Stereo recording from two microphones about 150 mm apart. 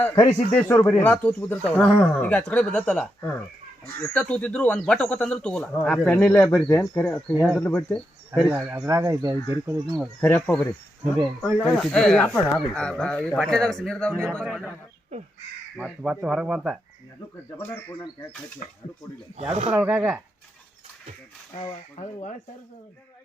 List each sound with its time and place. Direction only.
0.5 s speech: 10° left (ahead or behind)
8.4 s speech: 10° right (ahead or behind)
10.2 s speech: 10° left (ahead or behind)
15.8 s speech: 5° right (ahead or behind)
19.7 s speech: 10° right (ahead or behind)
21.7 s speech: 45° left (ahead or behind)